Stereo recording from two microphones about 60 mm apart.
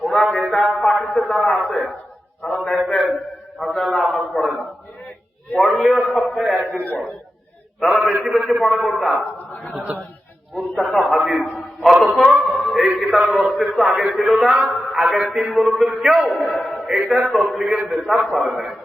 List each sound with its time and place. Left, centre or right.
0.0 s a man's voice: centre
5.5 s a man's voice: centre
6.7 s a man's voice: left
7.8 s a man's voice: centre
10.5 s a man's voice: centre